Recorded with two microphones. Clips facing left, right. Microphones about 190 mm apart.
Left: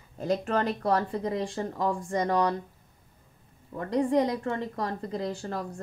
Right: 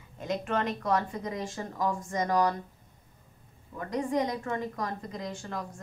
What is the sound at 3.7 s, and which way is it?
A woman's voice, 30° left (ahead or behind).